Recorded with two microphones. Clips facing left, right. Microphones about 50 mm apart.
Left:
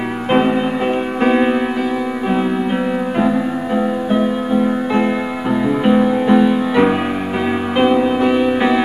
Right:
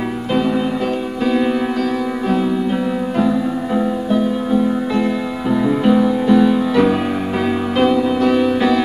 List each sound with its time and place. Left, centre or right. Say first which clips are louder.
0.3 s music: left 3 dB; left
3.2 s music: even; left